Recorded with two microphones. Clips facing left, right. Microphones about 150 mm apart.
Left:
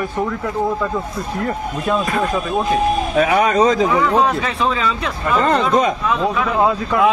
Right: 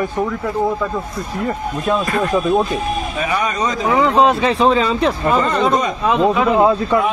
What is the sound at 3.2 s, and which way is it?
Speech, 70° left (ahead or behind).